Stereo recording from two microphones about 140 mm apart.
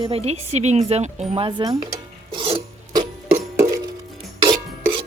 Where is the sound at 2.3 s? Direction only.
35° right (ahead or behind).